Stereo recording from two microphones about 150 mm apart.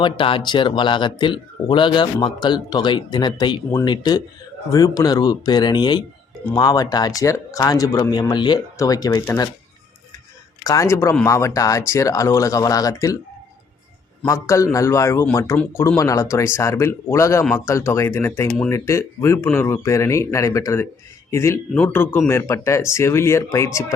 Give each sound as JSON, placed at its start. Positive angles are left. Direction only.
{"t": 0.0, "sound": "a man's voice", "side_deg": 35}
{"t": 10.6, "sound": "speech", "side_deg": 20}
{"t": 14.3, "sound": "speech", "side_deg": 20}